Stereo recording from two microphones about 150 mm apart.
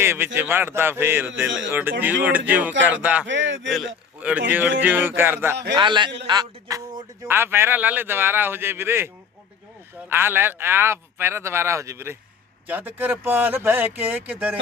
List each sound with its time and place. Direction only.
0.0 s a man's voice: 15° right (ahead or behind)
5.7 s a man's voice: 30° right (ahead or behind); by 9.0 s 15° right (ahead or behind)
10.1 s a man's voice: 15° right (ahead or behind)